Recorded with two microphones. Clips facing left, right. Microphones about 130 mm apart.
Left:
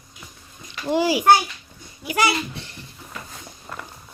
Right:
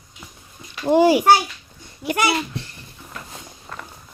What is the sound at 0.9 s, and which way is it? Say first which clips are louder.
Speech: right 6 dB; 50° right (ahead or behind).